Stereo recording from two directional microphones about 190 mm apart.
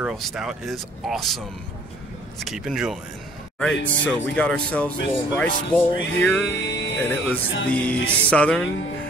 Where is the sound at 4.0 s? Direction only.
5° left (ahead or behind).